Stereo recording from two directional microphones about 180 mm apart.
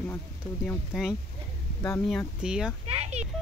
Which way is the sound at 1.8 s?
15° left (ahead or behind).